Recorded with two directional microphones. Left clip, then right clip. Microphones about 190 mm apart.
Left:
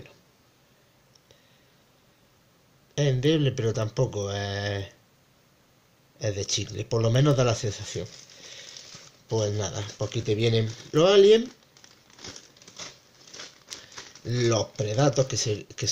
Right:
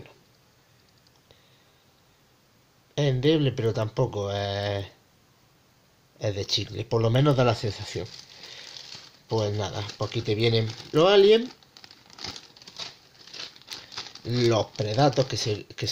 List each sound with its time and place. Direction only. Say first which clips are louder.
2.9 s speech: right 1 dB; 20° right (ahead or behind)
6.1 s speech: right 1 dB; 20° right (ahead or behind)
9.3 s speech: even; 20° right (ahead or behind)
13.9 s speech: right 2 dB; 20° right (ahead or behind)